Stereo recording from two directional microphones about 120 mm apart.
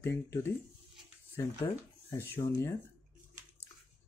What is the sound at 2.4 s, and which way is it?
Speech, 30° left (ahead or behind).